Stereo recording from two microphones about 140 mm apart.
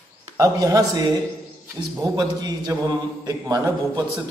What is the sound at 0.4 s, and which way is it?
Speech, 25° right (ahead or behind).